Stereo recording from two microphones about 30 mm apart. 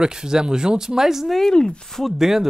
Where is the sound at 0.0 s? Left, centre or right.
Right.